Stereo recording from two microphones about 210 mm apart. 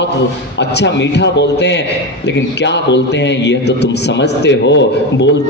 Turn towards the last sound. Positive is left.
turn(degrees=55)  # may be behind; listen again after turning